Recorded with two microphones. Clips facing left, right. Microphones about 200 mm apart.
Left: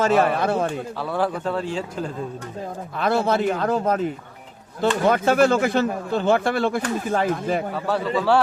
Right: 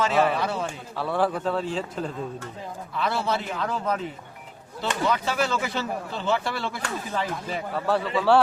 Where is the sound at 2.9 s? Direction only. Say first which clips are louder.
Left 6 dB; 50° left (ahead or behind).